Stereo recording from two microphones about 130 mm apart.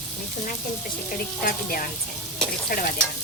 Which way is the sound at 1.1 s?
90° left.